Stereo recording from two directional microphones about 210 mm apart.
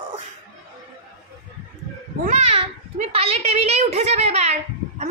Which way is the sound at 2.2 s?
30° right (ahead or behind).